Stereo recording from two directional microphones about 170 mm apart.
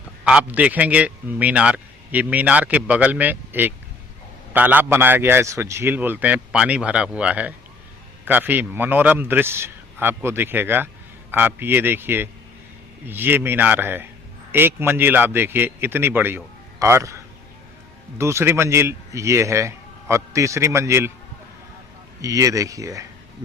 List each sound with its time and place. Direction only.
0.3 s a man's voice: 5° right (ahead or behind)
18.2 s a man's voice: 15° right (ahead or behind)
22.2 s speech: 20° right (ahead or behind)